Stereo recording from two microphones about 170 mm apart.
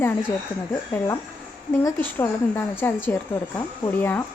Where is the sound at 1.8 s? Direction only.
10° left (ahead or behind).